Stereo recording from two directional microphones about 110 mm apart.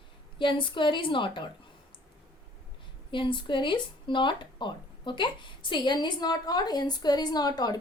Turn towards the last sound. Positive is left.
turn(degrees=35)  # may be behind; listen again after turning